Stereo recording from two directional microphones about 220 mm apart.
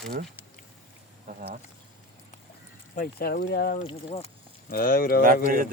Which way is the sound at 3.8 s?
25° left (ahead or behind).